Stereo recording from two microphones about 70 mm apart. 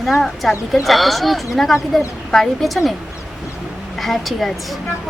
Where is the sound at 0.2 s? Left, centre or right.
Centre.